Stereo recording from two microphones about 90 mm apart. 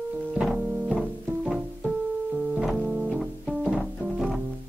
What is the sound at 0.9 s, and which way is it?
Music, 15° right (ahead or behind).